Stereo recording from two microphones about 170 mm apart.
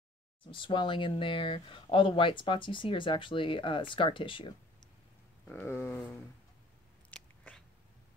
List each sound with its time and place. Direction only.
0.5 s speech: 30° left (ahead or behind)
5.5 s a sound: 10° left (ahead or behind)
7.1 s biting: 5° left (ahead or behind)